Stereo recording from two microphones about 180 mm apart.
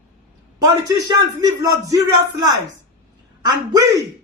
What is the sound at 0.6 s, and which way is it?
A man's voice, 20° right (ahead or behind).